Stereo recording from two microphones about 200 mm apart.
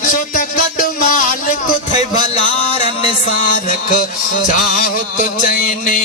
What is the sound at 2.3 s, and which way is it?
Music, 35° left (ahead or behind).